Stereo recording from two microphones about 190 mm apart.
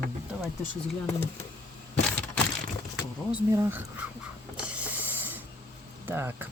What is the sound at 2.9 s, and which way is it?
Vehicle, 5° right (ahead or behind).